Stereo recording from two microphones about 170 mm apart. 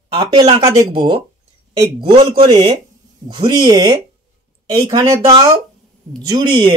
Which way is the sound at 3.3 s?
25° right (ahead or behind).